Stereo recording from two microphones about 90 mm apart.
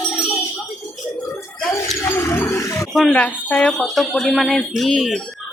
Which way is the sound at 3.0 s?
20° left (ahead or behind).